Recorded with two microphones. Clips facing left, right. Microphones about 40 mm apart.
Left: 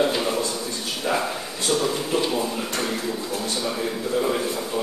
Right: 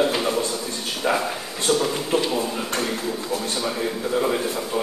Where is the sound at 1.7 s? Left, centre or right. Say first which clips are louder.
Even; centre.